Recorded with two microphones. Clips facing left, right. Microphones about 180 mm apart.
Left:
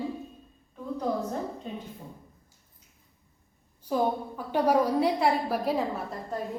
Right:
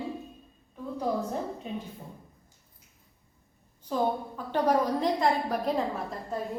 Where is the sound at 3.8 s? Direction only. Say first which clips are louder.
Left 1 dB; 10° left (ahead or behind).